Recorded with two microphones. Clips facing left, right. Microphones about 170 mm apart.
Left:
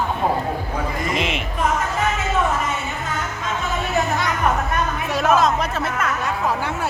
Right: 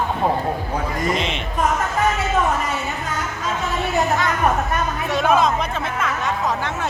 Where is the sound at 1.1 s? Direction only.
5° left (ahead or behind).